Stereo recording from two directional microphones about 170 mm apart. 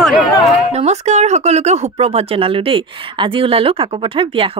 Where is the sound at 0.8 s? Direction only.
40° right (ahead or behind).